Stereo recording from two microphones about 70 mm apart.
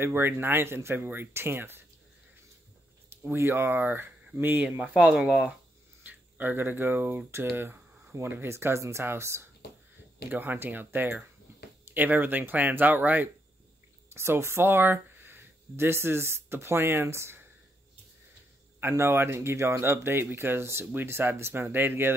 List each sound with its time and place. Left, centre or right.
0.0 s speech: right
3.1 s speech: right
4.8 s speech: centre
6.0 s speech: right
14.1 s speech: right
18.8 s speech: right